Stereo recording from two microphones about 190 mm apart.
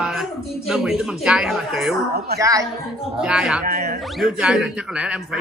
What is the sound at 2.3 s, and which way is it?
Speech, 15° right (ahead or behind).